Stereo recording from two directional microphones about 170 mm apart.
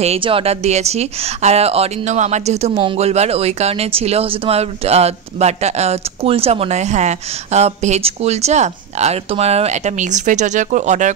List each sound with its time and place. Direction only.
0.0 s speech: 35° right (ahead or behind)